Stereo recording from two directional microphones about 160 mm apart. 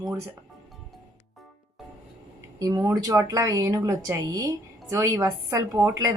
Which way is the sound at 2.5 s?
25° right (ahead or behind).